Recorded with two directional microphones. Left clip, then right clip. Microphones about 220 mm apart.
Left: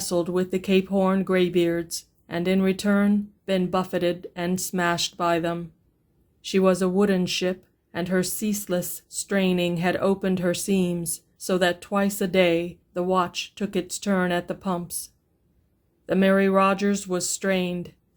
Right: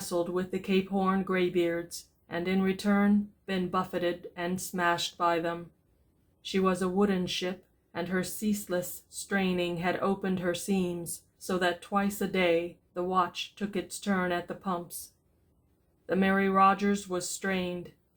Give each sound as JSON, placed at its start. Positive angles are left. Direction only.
{"t": 0.1, "sound": "speech", "side_deg": 40}
{"t": 16.0, "sound": "speech", "side_deg": 40}